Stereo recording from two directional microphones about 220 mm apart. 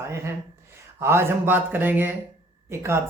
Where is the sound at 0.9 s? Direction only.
10° right (ahead or behind).